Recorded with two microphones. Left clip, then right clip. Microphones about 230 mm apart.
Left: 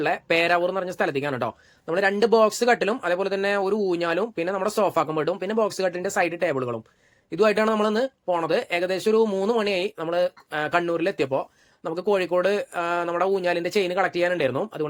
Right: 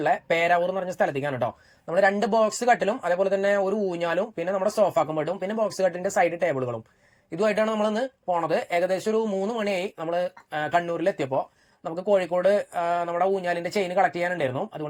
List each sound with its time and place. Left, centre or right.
0.0 s speech: centre